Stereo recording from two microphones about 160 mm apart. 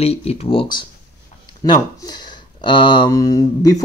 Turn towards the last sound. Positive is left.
turn(degrees=20)  # may be behind; listen again after turning